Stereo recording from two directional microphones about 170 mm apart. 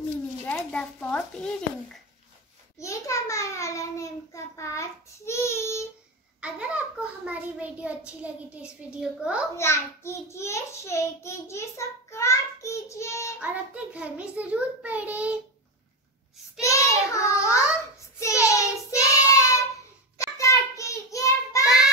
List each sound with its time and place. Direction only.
0.5 s a child's voice: 5° left (ahead or behind)
2.8 s a child's voice: 15° left (ahead or behind)
6.4 s a child's voice: 5° right (ahead or behind)
9.6 s a child's voice: 15° left (ahead or behind)
13.4 s a child's voice: 10° right (ahead or behind)
16.6 s a child's voice: 20° left (ahead or behind)
18.4 s child singing: 20° left (ahead or behind)
21.6 s child singing: 5° right (ahead or behind)